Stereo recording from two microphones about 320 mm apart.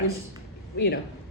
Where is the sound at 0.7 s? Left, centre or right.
Left.